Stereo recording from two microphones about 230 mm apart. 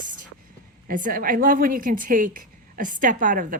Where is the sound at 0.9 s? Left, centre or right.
Right.